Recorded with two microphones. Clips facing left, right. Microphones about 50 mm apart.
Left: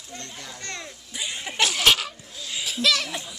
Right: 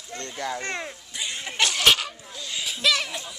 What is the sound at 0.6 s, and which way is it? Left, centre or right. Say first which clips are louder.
Speech: right 5 dB; right.